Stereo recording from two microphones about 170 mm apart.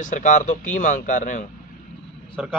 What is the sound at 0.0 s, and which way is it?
Speech, 50° left (ahead or behind).